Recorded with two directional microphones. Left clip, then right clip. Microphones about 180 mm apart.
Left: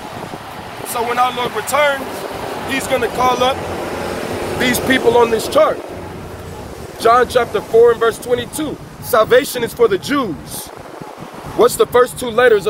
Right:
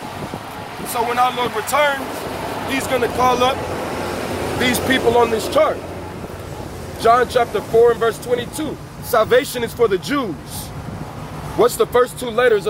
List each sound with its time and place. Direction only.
0.9 s speech: 5° left (ahead or behind)
4.6 s speech: 15° left (ahead or behind)
7.0 s speech: 25° left (ahead or behind)
11.5 s speech: 25° left (ahead or behind)